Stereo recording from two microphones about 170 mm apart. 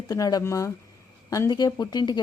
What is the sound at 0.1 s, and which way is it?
Speech, 20° left (ahead or behind).